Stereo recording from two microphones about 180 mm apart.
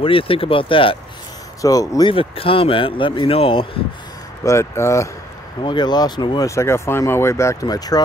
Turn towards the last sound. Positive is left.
turn(degrees=20)  # may be behind; listen again after turning